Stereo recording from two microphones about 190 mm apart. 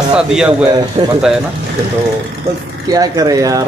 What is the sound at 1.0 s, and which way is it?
Speech, 30° right (ahead or behind).